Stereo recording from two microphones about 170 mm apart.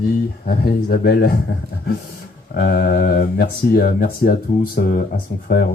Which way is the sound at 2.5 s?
55° left (ahead or behind).